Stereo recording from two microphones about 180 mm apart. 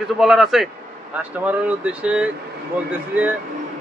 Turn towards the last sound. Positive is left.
turn(degrees=-10)  # may be behind; listen again after turning